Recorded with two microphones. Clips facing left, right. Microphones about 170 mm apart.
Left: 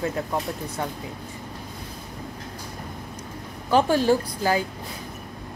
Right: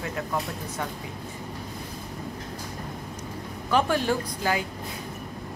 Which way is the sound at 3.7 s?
30° left (ahead or behind).